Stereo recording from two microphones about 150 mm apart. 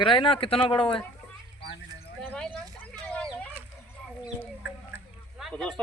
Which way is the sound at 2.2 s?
10° left (ahead or behind).